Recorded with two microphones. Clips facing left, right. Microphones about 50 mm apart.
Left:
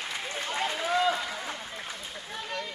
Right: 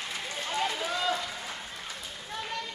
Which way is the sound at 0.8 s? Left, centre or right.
Left.